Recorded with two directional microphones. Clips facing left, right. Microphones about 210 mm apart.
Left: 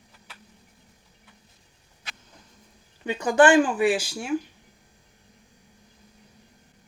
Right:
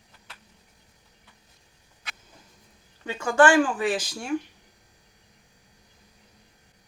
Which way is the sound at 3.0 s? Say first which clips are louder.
Left 2 dB; 15° left (ahead or behind).